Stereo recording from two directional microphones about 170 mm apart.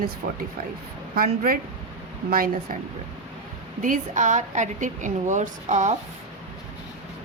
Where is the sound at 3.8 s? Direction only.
50° right (ahead or behind).